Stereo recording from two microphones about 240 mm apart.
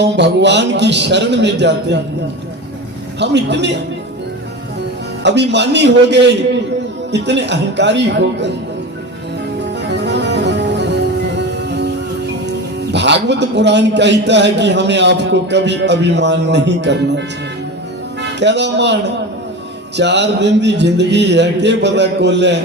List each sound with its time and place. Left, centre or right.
0.0 s a man's voice: right
3.2 s a man's voice: right
5.2 s a man's voice: right
9.8 s music: right
12.9 s a man's voice: right
18.3 s a man's voice: right
20.0 s a man's voice: right